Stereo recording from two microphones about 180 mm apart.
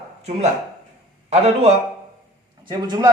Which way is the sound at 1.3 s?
35° right (ahead or behind).